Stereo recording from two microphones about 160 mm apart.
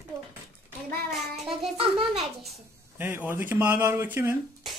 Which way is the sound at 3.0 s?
15° right (ahead or behind).